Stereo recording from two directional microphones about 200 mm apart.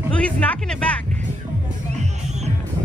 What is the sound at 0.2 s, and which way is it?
Speech, 5° left (ahead or behind).